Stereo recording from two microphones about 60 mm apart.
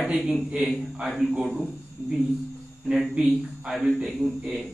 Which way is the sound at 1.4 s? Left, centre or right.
Centre.